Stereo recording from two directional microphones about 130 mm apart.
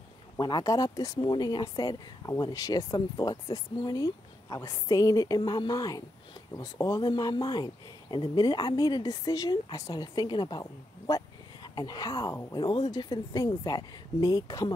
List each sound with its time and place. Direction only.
0.4 s speech: 35° left (ahead or behind)
12.5 s speech: 35° left (ahead or behind)